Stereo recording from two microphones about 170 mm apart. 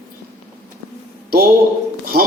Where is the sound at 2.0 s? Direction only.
60° right (ahead or behind).